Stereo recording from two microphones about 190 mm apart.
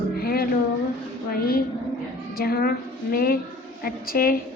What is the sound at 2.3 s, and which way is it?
A woman's voice, 55° left (ahead or behind).